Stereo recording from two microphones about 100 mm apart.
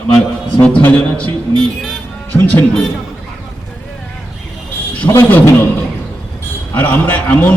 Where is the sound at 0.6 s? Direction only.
15° left (ahead or behind).